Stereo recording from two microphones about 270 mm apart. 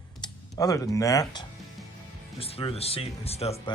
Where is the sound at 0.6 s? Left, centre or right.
Centre.